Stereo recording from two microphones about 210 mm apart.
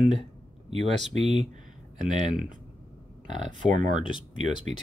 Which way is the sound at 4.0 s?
25° left (ahead or behind).